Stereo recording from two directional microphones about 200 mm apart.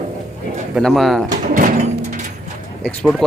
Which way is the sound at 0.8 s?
Centre (ahead or behind).